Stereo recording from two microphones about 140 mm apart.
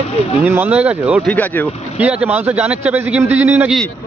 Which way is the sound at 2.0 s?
10° right (ahead or behind).